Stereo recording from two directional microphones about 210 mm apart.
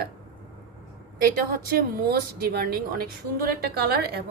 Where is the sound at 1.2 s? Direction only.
45° right (ahead or behind).